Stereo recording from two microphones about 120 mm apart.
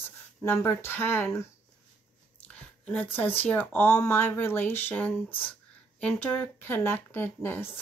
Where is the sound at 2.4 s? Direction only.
15° left (ahead or behind).